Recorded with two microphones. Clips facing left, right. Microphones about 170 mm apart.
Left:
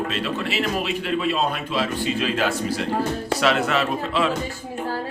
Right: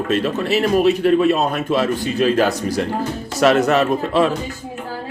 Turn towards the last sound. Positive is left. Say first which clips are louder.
# right 6 dB
turn(degrees=-45)  # may be behind; listen again after turning